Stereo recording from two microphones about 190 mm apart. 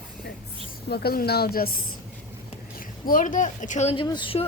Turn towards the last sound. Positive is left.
turn(degrees=25)  # may be behind; listen again after turning